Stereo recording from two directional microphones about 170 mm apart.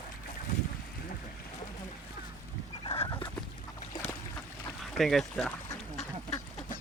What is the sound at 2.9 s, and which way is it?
Fowl, 30° left (ahead or behind).